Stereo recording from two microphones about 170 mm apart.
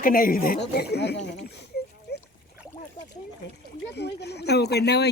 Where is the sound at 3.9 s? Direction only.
80° left.